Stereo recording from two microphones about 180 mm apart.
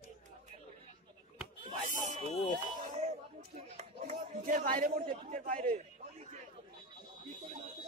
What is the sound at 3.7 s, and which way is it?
Speech, 40° right (ahead or behind).